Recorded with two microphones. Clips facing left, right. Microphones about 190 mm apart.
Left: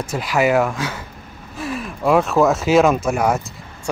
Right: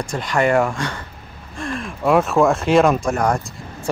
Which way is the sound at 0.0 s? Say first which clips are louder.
Left 1 dB; 5° left (ahead or behind).